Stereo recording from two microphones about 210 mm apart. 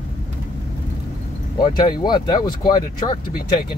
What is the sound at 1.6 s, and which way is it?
Speech, 20° left (ahead or behind).